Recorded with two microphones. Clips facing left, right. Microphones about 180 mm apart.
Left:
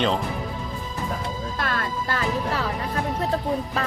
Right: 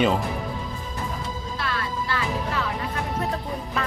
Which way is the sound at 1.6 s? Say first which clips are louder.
Left 1 dB; 50° left (ahead or behind).